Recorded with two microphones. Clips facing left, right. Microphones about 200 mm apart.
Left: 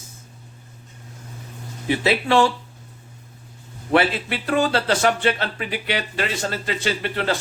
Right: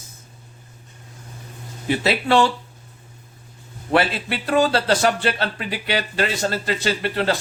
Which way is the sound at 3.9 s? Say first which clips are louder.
Left 1 dB; 35° right (ahead or behind).